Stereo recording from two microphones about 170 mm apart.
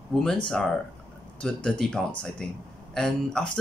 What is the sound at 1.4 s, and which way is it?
Speech, 5° left (ahead or behind).